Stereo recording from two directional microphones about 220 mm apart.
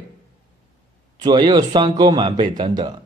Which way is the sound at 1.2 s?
20° right (ahead or behind).